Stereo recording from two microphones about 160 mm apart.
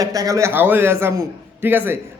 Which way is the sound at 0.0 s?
20° right (ahead or behind).